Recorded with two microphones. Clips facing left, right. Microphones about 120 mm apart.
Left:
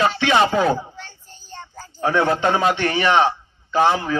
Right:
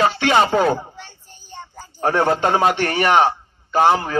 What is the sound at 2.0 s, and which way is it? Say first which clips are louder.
Speech: right 1 dB; 50° right (ahead or behind).